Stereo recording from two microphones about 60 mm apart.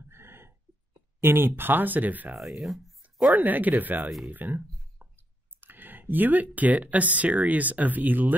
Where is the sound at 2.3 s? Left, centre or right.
Centre.